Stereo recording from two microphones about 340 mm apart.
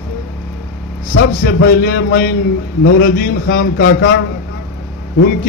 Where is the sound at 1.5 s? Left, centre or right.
Left.